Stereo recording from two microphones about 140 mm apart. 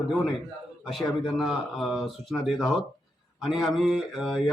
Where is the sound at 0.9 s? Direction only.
Centre (ahead or behind).